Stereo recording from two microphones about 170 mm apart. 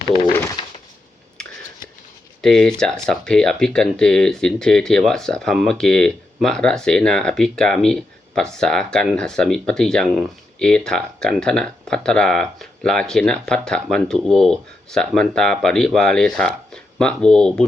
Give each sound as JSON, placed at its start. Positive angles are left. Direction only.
{"t": 0.0, "sound": "pigeon", "side_deg": 30}
{"t": 1.4, "sound": "scissors", "side_deg": 5}
{"t": 2.4, "sound": "speech", "side_deg": 0}